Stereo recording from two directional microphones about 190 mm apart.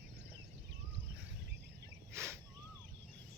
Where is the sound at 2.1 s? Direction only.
15° right (ahead or behind).